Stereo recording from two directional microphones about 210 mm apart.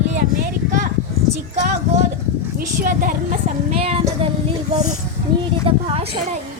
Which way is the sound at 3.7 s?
30° right (ahead or behind).